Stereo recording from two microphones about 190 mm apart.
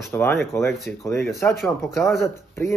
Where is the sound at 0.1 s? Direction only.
10° left (ahead or behind).